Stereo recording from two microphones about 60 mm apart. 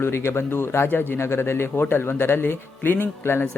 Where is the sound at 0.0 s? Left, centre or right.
Left.